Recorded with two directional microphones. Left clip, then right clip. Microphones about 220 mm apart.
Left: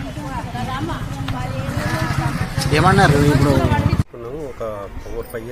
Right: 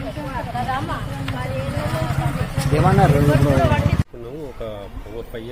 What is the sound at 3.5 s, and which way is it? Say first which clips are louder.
Speech: right 1 dB; 10° right (ahead or behind).